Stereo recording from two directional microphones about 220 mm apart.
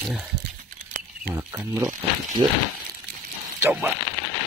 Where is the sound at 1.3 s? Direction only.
10° right (ahead or behind).